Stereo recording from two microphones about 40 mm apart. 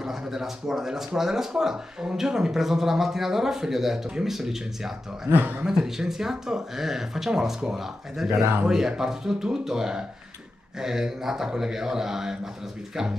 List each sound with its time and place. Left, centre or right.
0.0 s speech: centre
5.3 s speech: right
5.6 s speech: centre